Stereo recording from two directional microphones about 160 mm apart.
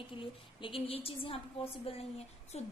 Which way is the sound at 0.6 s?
35° left (ahead or behind).